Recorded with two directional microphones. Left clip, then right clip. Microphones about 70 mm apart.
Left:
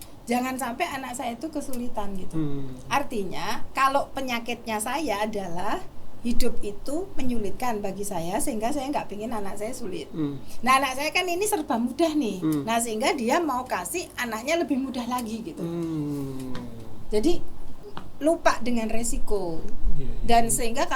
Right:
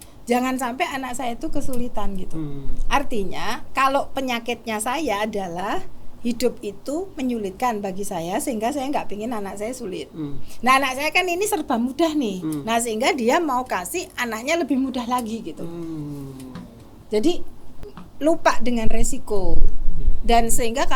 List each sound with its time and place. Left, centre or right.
0.3 s a woman's voice: right
2.3 s a woman's voice: left
2.9 s a woman's voice: right
15.6 s a woman's voice: left
17.1 s a woman's voice: right